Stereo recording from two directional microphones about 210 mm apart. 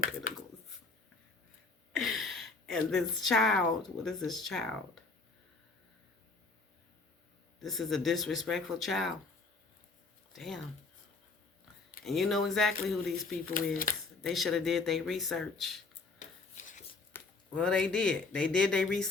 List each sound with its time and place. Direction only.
2.0 s a woman's voice: centre (ahead or behind)
7.6 s speech: centre (ahead or behind)
10.3 s speech: centre (ahead or behind)
12.0 s speech: centre (ahead or behind)
16.6 s a sound: 35° left (ahead or behind)
17.1 s speech: 5° left (ahead or behind)